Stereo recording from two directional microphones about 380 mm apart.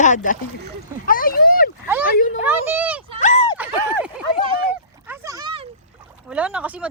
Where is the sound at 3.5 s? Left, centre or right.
Centre.